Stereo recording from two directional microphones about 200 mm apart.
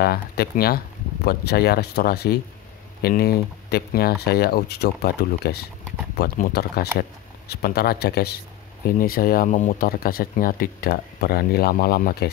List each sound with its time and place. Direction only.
0.0 s speech: 50° left (ahead or behind)